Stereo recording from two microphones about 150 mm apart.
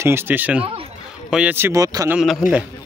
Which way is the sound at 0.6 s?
40° right (ahead or behind).